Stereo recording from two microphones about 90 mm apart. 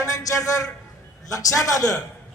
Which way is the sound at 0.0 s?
40° left (ahead or behind).